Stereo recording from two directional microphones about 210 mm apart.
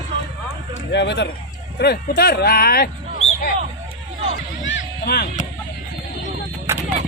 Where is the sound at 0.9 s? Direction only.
55° left (ahead or behind).